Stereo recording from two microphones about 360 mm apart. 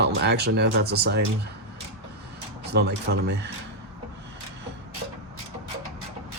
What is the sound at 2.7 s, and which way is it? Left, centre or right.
Speech, right.